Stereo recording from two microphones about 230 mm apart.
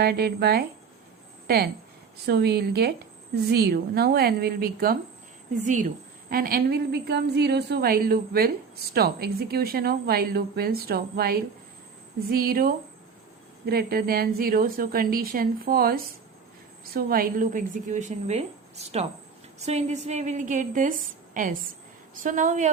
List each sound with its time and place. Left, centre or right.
0.0 s a woman's voice: right